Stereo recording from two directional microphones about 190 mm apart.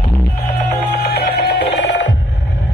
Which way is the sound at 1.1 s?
60° left (ahead or behind).